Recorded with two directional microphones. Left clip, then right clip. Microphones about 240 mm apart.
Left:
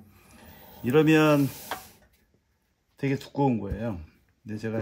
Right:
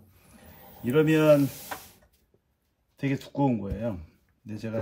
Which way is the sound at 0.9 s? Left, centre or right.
Centre.